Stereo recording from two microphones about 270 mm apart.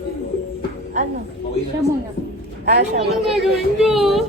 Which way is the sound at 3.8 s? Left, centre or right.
Centre.